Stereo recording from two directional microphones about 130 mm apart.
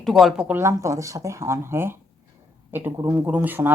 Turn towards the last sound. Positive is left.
turn(degrees=-15)  # may be behind; listen again after turning